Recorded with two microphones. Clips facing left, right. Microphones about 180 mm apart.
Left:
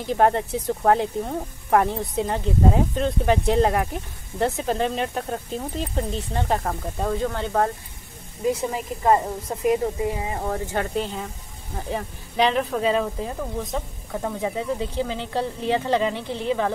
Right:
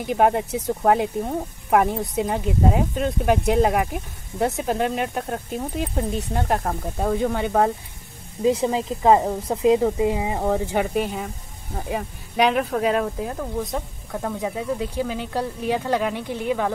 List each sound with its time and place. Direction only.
0.0 s speech: 10° right (ahead or behind)
14.8 s speech: 10° right (ahead or behind)